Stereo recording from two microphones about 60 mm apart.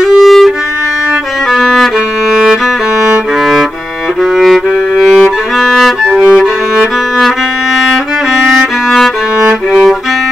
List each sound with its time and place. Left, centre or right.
0.0 s violin: centre
1.5 s music: centre
4.4 s music: centre
8.4 s music: centre
9.7 s music: centre